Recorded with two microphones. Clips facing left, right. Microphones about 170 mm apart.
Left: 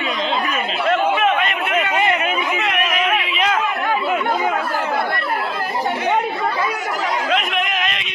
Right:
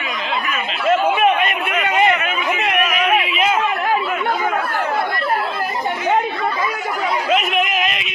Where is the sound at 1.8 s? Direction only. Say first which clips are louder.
Right 3 dB; 20° right (ahead or behind).